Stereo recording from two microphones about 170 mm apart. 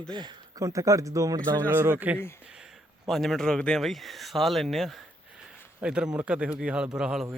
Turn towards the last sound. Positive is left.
turn(degrees=0)  # may be behind; listen again after turning